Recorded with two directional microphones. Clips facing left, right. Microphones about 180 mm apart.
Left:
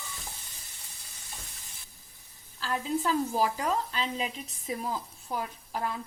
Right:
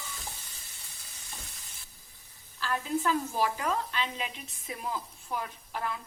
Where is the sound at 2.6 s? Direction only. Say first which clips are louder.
Even; 35° left (ahead or behind).